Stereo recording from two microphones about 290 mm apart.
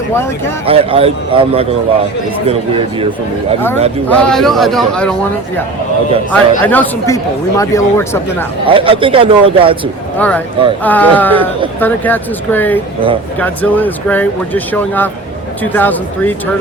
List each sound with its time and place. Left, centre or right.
0.6 s speech: centre
4.1 s speech: centre
6.3 s speech: centre
8.6 s a man's voice: centre
10.2 s speech: centre